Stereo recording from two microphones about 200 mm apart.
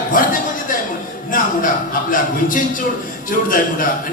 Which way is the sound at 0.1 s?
45° left (ahead or behind).